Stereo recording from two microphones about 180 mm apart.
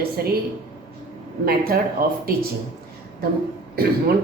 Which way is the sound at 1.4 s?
55° right (ahead or behind).